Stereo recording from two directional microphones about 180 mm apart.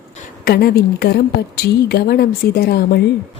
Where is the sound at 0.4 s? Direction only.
60° left (ahead or behind).